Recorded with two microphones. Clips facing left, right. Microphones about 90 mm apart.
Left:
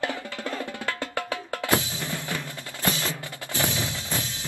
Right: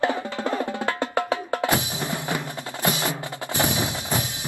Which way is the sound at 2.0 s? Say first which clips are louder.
Right 4 dB; 20° right (ahead or behind).